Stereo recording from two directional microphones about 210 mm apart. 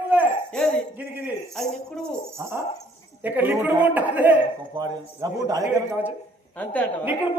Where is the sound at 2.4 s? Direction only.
15° right (ahead or behind).